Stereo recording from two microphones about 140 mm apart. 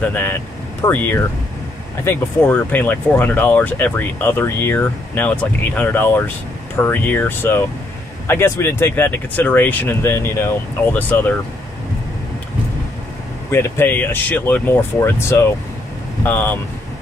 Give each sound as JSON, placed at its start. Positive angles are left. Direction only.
{"t": 0.0, "sound": "speech", "side_deg": 15}
{"t": 13.5, "sound": "speech", "side_deg": 15}